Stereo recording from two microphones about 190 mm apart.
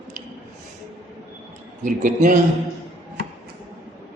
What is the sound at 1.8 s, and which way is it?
Speech, 45° right (ahead or behind).